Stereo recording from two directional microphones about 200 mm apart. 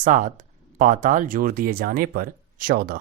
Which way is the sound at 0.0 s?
40° right (ahead or behind).